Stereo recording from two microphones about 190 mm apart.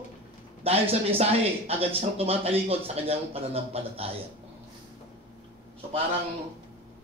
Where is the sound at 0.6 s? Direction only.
30° right (ahead or behind).